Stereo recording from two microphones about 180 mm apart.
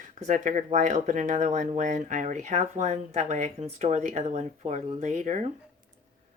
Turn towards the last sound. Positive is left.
turn(degrees=-40)  # may be behind; listen again after turning